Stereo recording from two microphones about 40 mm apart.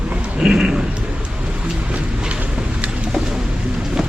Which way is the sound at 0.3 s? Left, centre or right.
Centre.